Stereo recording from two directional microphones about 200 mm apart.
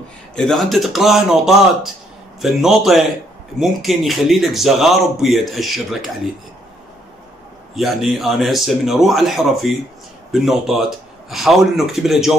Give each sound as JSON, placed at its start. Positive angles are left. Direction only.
{"t": 0.4, "sound": "speech", "side_deg": 0}
{"t": 7.7, "sound": "speech", "side_deg": 0}